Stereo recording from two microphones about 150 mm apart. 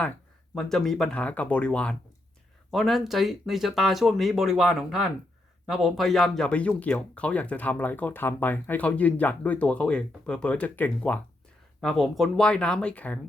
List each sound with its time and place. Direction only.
0.5 s speech: 5° left (ahead or behind)